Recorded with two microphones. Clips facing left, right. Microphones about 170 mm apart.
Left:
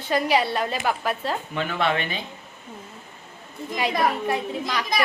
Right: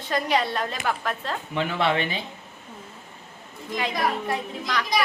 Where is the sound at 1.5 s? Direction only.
25° right (ahead or behind).